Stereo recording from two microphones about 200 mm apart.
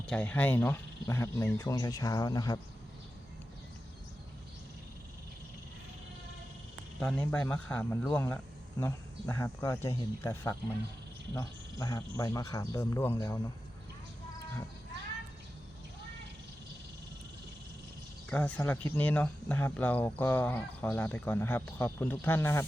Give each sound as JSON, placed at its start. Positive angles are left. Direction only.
{"t": 0.0, "sound": "speech", "side_deg": 5}
{"t": 7.0, "sound": "speech", "side_deg": 5}
{"t": 18.3, "sound": "speech", "side_deg": 5}